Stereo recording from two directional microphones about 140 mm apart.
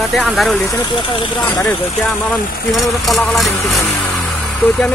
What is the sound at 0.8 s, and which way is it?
Speech, 35° left (ahead or behind).